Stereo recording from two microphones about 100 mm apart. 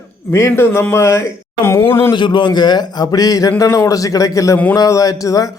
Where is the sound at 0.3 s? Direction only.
25° left (ahead or behind).